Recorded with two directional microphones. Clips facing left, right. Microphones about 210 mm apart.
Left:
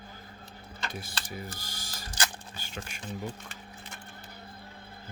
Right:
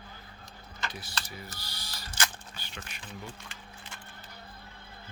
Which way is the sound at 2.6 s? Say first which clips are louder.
Left 6 dB; 45° left (ahead or behind).